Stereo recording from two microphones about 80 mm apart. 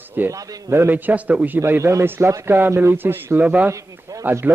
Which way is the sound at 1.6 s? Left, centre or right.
Right.